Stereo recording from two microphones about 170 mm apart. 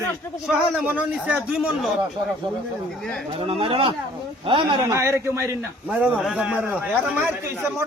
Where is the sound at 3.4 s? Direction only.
35° right (ahead or behind).